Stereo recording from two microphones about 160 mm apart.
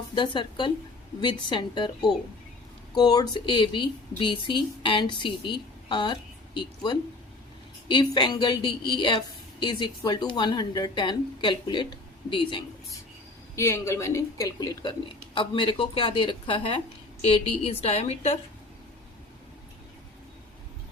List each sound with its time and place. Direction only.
0.1 s speech: 30° left (ahead or behind)
13.6 s a woman's voice: 15° left (ahead or behind); by 18.3 s 40° left (ahead or behind)